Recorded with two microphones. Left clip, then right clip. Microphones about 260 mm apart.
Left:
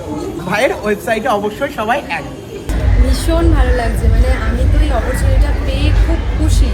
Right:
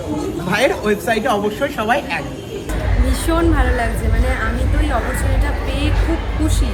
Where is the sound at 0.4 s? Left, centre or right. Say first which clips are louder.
Left 2 dB; centre.